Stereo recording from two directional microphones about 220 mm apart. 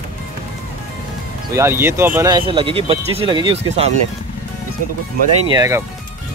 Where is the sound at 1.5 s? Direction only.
10° right (ahead or behind).